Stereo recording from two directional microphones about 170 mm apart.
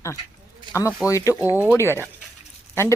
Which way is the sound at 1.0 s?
20° left (ahead or behind).